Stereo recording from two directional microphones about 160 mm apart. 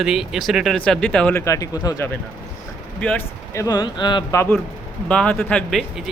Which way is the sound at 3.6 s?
25° left (ahead or behind).